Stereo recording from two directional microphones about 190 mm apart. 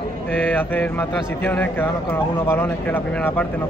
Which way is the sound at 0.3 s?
10° left (ahead or behind).